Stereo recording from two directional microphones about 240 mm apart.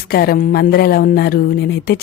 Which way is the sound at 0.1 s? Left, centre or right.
Left.